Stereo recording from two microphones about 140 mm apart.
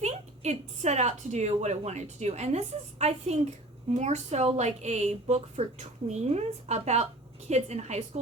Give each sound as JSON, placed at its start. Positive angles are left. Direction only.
{"t": 0.0, "sound": "speech", "side_deg": -55}